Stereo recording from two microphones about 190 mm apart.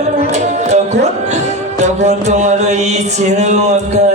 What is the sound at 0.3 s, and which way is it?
Speech, 35° right (ahead or behind).